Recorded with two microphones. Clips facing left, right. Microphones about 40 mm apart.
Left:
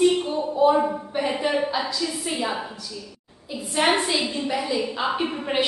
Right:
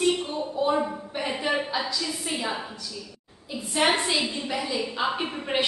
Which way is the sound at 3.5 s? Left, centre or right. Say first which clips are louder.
Left 2 dB; centre.